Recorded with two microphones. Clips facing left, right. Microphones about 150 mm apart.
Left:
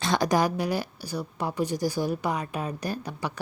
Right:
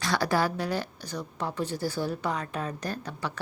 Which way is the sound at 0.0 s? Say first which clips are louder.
Left 3 dB; 20° left (ahead or behind).